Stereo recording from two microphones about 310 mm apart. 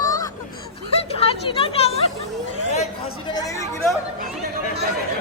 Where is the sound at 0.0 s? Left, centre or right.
Centre.